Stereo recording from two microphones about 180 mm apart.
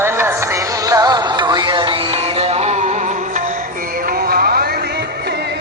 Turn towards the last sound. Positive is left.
turn(degrees=-60)  # may be behind; listen again after turning